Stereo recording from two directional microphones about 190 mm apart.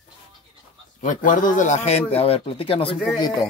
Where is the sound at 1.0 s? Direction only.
40° left (ahead or behind).